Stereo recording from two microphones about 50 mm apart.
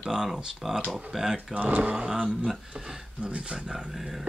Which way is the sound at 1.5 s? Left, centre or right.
Right.